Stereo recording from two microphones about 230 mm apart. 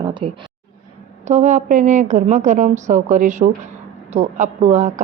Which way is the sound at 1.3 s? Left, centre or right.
Right.